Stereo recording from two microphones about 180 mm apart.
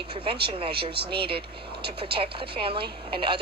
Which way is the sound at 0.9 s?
60° right (ahead or behind).